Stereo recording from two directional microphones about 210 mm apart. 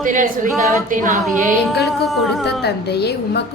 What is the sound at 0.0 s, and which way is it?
Speech, 40° right (ahead or behind).